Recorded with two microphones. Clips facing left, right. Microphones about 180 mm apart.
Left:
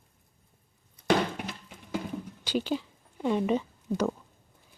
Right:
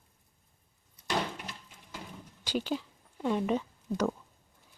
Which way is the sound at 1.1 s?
65° left (ahead or behind).